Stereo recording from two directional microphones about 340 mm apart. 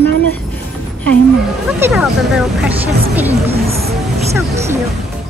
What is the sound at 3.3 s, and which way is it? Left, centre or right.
Speech, centre.